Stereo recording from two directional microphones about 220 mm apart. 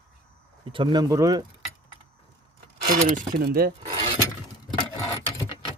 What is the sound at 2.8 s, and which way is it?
Speech, 45° right (ahead or behind).